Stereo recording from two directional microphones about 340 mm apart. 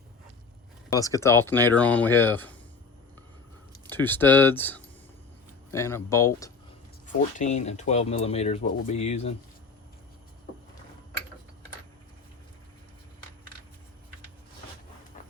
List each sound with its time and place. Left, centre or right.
0.9 s speech: centre
3.8 s speech: centre
7.3 s speech: left